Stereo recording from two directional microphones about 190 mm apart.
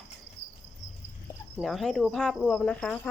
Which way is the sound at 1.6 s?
Centre (ahead or behind).